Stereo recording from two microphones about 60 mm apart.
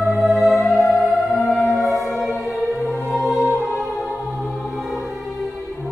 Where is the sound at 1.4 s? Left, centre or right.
Left.